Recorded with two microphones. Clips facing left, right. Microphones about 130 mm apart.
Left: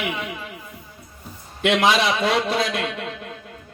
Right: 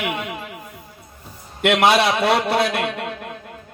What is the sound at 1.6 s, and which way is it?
A man's voice, 60° right (ahead or behind).